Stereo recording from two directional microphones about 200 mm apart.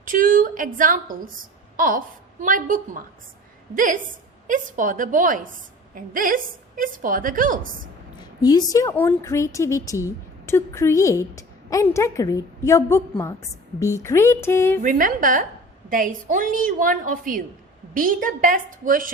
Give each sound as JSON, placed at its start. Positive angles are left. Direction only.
{"t": 0.0, "sound": "a woman's voice", "side_deg": -40}
{"t": 8.2, "sound": "a woman's voice", "side_deg": 20}
{"t": 14.8, "sound": "a woman's voice", "side_deg": -45}